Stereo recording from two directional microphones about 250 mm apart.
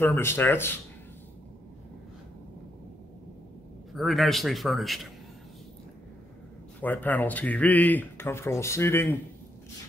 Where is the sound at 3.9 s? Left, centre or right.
Centre.